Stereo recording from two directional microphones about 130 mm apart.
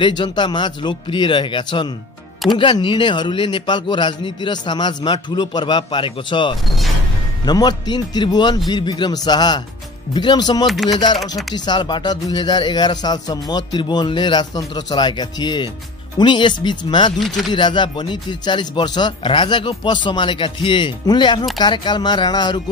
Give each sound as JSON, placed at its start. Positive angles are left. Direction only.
{"t": 0.0, "sound": "speech", "side_deg": 35}
{"t": 10.7, "sound": "speech", "side_deg": 0}
{"t": 11.5, "sound": "speech", "side_deg": 35}